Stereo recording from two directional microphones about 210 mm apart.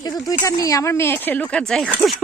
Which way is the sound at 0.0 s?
20° left (ahead or behind).